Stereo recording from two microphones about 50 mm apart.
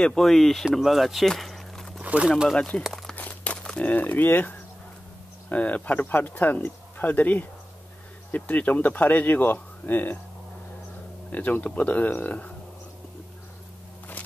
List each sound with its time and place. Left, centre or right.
0.0 s speech: centre
0.7 s speech: centre
1.2 s a sound: centre
2.2 s speech: centre
2.9 s crumpling: centre
3.2 s a sound: left
3.7 s speech: left
11.3 s speech: left